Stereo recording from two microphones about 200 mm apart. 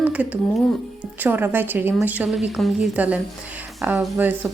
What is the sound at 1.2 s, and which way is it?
A woman's voice, 10° right (ahead or behind).